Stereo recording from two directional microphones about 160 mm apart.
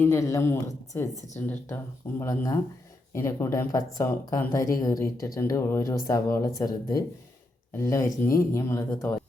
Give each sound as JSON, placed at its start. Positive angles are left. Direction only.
{"t": 0.0, "sound": "speech", "side_deg": 15}